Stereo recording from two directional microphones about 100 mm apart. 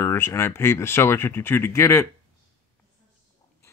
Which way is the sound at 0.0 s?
25° left (ahead or behind).